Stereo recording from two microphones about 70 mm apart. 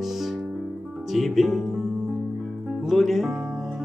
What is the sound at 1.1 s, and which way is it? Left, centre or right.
Speech, centre.